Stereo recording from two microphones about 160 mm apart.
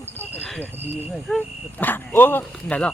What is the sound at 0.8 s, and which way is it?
Speech, 10° right (ahead or behind).